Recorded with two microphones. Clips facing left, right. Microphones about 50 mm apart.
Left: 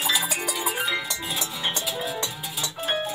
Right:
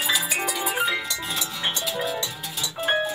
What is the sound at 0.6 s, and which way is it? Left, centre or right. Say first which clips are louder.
Music: right 1 dB; centre.